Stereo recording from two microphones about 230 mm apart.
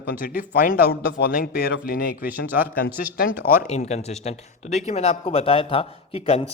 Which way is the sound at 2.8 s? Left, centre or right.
Left.